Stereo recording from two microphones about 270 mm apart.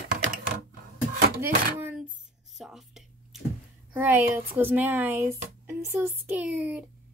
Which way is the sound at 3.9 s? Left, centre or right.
Centre.